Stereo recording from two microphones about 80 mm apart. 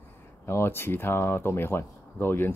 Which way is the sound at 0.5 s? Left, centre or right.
Left.